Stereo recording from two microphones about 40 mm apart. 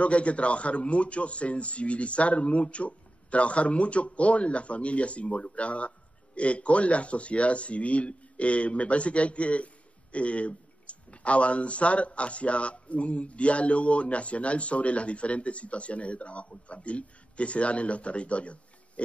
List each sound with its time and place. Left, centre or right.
0.0 s a man's voice: left